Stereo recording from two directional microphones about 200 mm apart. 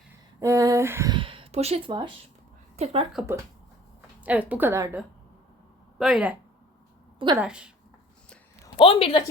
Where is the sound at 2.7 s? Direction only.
30° right (ahead or behind).